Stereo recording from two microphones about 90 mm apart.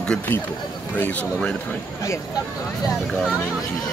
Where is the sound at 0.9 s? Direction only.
20° left (ahead or behind).